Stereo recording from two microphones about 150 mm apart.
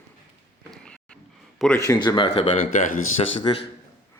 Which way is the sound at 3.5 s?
30° left (ahead or behind).